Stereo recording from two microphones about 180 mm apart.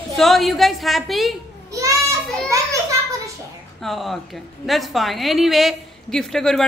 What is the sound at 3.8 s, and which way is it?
A woman's voice, centre (ahead or behind).